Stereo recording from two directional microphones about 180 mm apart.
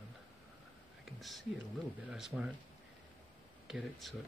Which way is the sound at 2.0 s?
5° right (ahead or behind).